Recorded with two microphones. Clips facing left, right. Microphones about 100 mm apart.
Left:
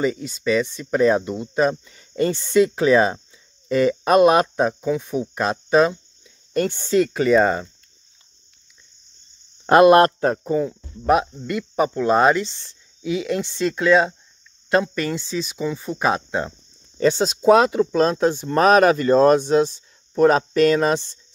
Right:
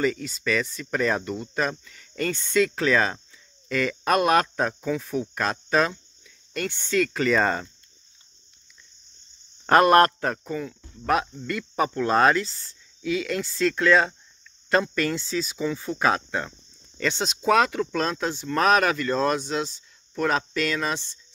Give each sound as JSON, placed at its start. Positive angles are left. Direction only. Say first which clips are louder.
{"t": 0.4, "sound": "speech", "louder": "left 8 dB", "side_deg": 20}
{"t": 6.5, "sound": "speech", "louder": "left 8 dB", "side_deg": 35}
{"t": 7.2, "sound": "speech", "louder": "left 6 dB", "side_deg": 10}
{"t": 9.7, "sound": "speech", "louder": "left 5 dB", "side_deg": 20}
{"t": 11.1, "sound": "speech", "louder": "left 6 dB", "side_deg": 15}
{"t": 12.4, "sound": "speech", "louder": "left 2 dB", "side_deg": 25}
{"t": 17.0, "sound": "speech", "louder": "left 9 dB", "side_deg": 35}